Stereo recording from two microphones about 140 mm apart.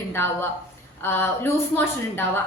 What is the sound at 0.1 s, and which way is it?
A woman's voice, 15° left (ahead or behind).